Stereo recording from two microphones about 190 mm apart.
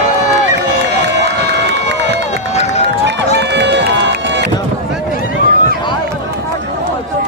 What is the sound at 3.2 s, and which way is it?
Run, 65° right (ahead or behind).